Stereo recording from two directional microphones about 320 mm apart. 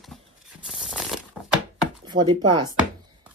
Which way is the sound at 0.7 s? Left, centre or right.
Centre.